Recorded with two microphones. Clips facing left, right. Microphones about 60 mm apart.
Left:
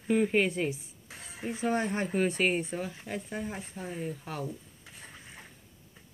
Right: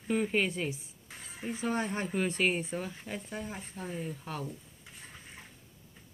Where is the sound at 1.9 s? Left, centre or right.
Centre.